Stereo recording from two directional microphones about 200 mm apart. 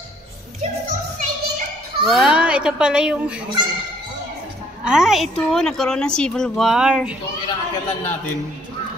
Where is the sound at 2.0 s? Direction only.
5° right (ahead or behind).